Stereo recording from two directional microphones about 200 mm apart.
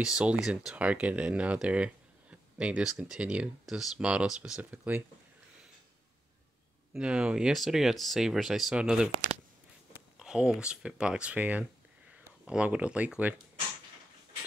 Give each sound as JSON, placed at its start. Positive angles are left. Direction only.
{"t": 0.0, "sound": "speech", "side_deg": -5}
{"t": 6.9, "sound": "speech", "side_deg": -5}
{"t": 10.1, "sound": "speech", "side_deg": -5}